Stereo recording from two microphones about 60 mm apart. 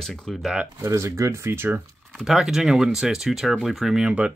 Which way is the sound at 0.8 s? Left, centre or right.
Right.